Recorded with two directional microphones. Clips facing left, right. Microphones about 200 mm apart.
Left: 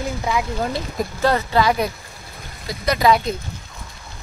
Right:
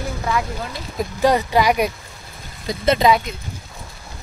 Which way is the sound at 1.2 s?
15° right (ahead or behind).